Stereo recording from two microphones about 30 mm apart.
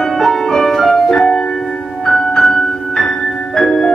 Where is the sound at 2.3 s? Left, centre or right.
Centre.